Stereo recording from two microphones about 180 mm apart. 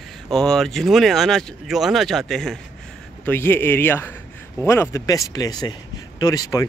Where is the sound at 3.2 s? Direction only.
10° left (ahead or behind).